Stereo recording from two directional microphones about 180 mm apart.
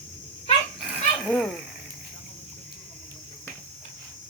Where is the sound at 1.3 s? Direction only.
5° left (ahead or behind).